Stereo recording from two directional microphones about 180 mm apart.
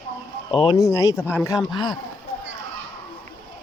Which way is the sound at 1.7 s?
25° left (ahead or behind).